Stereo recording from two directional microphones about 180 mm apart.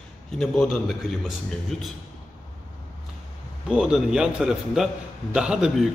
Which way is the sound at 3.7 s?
5° right (ahead or behind).